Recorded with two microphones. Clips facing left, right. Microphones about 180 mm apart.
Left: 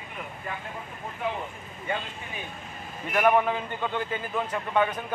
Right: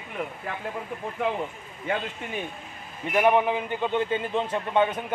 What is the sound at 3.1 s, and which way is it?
A man's voice, 15° right (ahead or behind).